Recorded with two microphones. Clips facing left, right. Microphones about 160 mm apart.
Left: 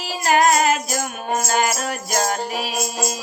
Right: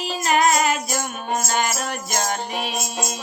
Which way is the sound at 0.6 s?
40° left (ahead or behind).